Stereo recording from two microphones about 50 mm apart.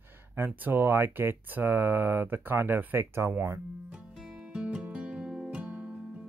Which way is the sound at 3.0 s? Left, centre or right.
Right.